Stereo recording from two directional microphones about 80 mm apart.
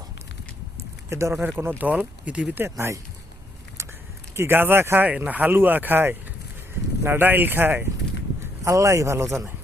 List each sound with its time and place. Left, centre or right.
1.1 s speech: right; by 2.6 s centre
2.6 s a man's voice: right
4.4 s speech: right
8.6 s a man's voice: right